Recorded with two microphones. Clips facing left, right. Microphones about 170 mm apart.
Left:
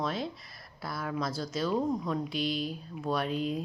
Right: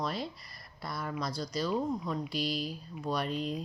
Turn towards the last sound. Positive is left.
turn(degrees=0)  # may be behind; listen again after turning